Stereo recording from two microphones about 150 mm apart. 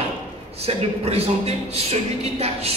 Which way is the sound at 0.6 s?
40° right (ahead or behind).